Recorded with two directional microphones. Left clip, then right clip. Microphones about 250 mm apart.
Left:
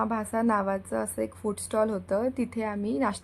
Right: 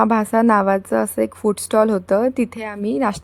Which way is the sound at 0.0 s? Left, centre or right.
Right.